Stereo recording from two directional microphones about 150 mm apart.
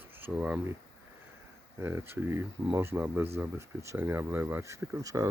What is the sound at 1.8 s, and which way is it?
Speech, 15° right (ahead or behind).